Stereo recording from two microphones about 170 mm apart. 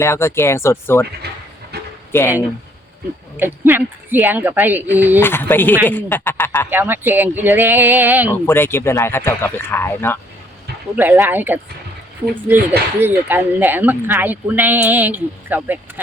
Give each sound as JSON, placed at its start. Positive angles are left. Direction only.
{"t": 0.0, "sound": "speech", "side_deg": 15}
{"t": 1.2, "sound": "a sound", "side_deg": -70}
{"t": 2.1, "sound": "speech", "side_deg": 10}
{"t": 3.3, "sound": "speech", "side_deg": -10}
{"t": 5.2, "sound": "speech", "side_deg": 10}
{"t": 6.7, "sound": "speech", "side_deg": -10}
{"t": 8.3, "sound": "speech", "side_deg": 15}
{"t": 10.9, "sound": "speech", "side_deg": -15}